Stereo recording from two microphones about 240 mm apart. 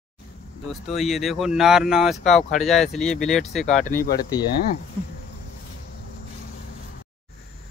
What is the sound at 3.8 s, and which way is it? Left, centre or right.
Speech, left.